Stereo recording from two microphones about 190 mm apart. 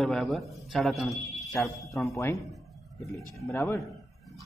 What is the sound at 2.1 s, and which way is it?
Speech, 15° left (ahead or behind).